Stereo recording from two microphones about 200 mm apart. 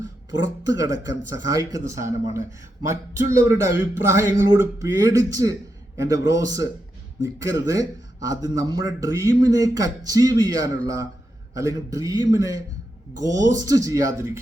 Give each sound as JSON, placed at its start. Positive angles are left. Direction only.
{"t": 0.4, "sound": "speech", "side_deg": -15}